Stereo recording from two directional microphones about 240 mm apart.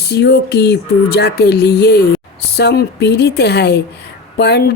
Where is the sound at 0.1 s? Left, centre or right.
Left.